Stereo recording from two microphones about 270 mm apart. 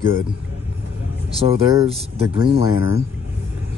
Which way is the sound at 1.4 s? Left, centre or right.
Right.